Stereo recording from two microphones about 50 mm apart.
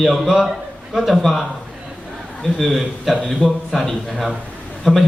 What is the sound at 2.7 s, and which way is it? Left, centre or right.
Speech, centre.